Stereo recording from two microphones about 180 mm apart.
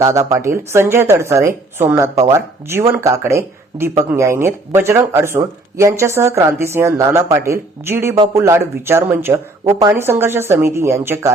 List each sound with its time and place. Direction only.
0.0 s speech: 20° right (ahead or behind)